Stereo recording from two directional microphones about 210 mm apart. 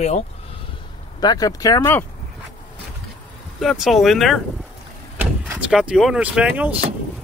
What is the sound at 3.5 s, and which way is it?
Speech, centre (ahead or behind).